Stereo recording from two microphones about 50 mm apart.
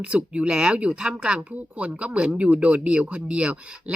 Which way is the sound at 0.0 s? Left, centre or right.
Right.